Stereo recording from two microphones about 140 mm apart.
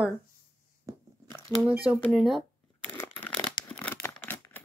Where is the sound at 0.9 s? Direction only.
25° right (ahead or behind).